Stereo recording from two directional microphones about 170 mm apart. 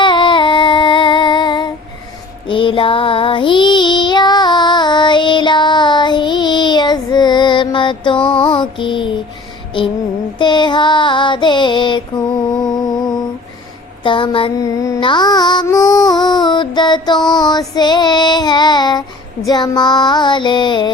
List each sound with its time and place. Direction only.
0.0 s child singing: 30° left (ahead or behind)
14.0 s child singing: 30° left (ahead or behind)
14.8 s music: 25° left (ahead or behind)
19.5 s child singing: 25° left (ahead or behind)